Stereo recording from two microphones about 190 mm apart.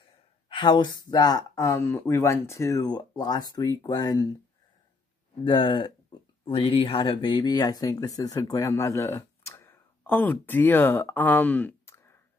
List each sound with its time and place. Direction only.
0.5 s speech: 25° left (ahead or behind)
5.4 s speech: 25° left (ahead or behind)